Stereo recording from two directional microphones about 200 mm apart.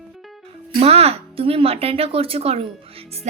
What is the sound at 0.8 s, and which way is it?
A woman's voice, 30° right (ahead or behind).